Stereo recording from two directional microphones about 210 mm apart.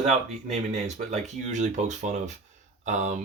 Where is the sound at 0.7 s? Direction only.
35° right (ahead or behind).